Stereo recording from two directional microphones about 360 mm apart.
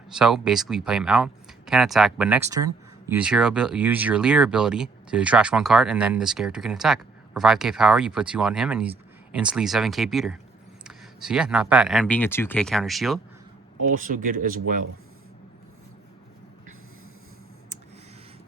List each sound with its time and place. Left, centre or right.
0.1 s speech: centre
13.9 s speech: right